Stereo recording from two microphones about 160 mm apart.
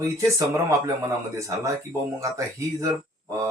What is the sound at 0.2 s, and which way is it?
Speech, 20° right (ahead or behind).